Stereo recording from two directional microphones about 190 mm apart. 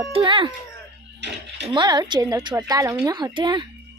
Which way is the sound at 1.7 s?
20° right (ahead or behind).